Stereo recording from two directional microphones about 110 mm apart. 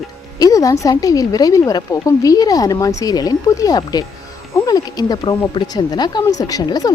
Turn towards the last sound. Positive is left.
turn(degrees=35)  # may be behind; listen again after turning